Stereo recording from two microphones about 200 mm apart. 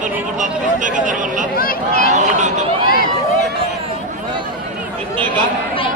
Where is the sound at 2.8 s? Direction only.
40° left (ahead or behind).